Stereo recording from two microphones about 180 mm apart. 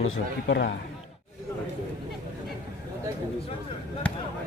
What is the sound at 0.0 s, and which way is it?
Speech, 75° left (ahead or behind).